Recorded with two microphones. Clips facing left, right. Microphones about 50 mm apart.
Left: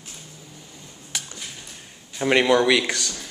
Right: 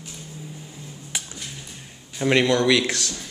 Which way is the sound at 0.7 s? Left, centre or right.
Centre.